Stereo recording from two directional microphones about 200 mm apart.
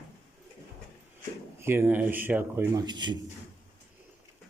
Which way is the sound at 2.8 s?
20° right (ahead or behind).